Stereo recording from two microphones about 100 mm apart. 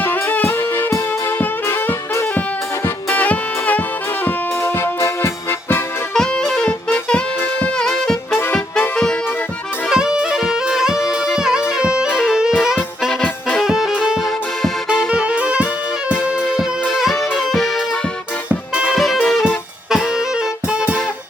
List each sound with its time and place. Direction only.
0.0 s music: 20° left (ahead or behind)
3.1 s music: 15° left (ahead or behind)
4.6 s music: 25° left (ahead or behind)
6.1 s music: 5° left (ahead or behind)
9.9 s music: 10° right (ahead or behind)
18.4 s music: 10° right (ahead or behind)
18.9 s music: centre (ahead or behind)